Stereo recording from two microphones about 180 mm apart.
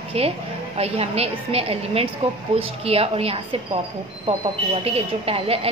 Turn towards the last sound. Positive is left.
turn(degrees=-35)  # may be behind; listen again after turning